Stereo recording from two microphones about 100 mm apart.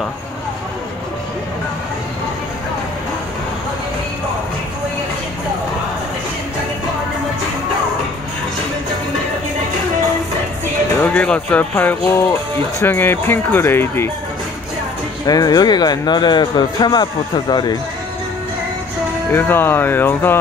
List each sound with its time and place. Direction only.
11.0 s speech: 10° left (ahead or behind)
15.2 s speech: 40° left (ahead or behind)
19.3 s speech: 20° left (ahead or behind)